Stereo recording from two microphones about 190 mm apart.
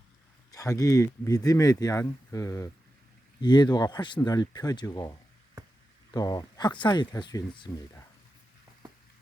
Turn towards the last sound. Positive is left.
turn(degrees=25)  # may be behind; listen again after turning